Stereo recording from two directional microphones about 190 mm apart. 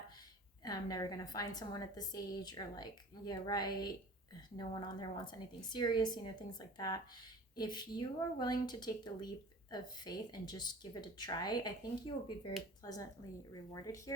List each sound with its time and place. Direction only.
0.6 s a woman's voice: 20° left (ahead or behind)